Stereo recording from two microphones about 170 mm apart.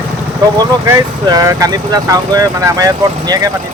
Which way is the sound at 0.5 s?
25° right (ahead or behind).